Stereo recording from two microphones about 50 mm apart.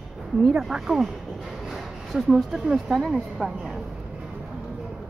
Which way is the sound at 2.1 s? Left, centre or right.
Centre.